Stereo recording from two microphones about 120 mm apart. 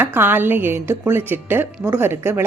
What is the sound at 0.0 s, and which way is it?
A woman's voice, 15° right (ahead or behind).